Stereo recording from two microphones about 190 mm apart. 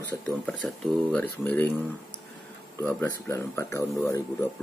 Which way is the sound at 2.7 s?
10° left (ahead or behind).